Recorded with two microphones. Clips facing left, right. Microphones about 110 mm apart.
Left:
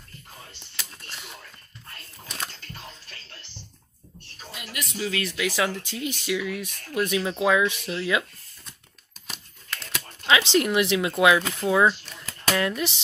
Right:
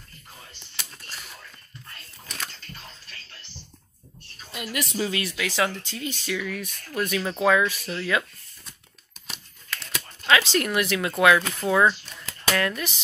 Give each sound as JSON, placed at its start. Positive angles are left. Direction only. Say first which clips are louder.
{"t": 1.1, "sound": "a sound", "louder": "left 1 dB", "side_deg": 20}
{"t": 2.2, "sound": "camera", "louder": "left 2 dB", "side_deg": 15}
{"t": 4.7, "sound": "speech", "louder": "right 3 dB", "side_deg": -35}
{"t": 5.4, "sound": "speech", "louder": "left 1 dB", "side_deg": 10}
{"t": 9.3, "sound": "crumpling", "louder": "even", "side_deg": 0}
{"t": 10.2, "sound": "speech", "louder": "left 1 dB", "side_deg": 20}